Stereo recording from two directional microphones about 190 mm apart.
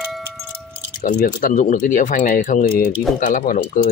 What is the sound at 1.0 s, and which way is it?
Speech, 45° left (ahead or behind).